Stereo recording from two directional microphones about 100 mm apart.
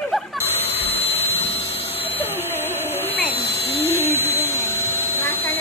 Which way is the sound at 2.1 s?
20° left (ahead or behind).